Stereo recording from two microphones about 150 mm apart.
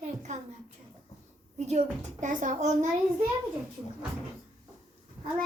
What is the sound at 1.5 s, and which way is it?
A woman's voice, 50° right (ahead or behind).